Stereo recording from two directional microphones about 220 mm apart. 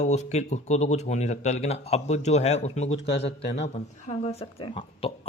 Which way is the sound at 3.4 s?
55° left (ahead or behind).